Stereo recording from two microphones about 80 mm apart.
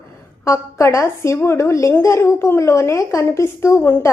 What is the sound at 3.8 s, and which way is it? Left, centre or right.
Speech, left.